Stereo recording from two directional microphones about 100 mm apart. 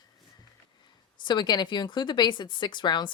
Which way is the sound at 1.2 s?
45° left (ahead or behind).